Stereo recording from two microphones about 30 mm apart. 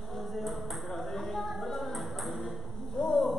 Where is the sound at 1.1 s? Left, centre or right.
Centre.